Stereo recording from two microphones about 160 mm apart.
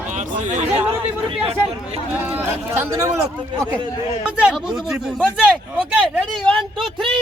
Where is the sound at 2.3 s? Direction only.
15° right (ahead or behind).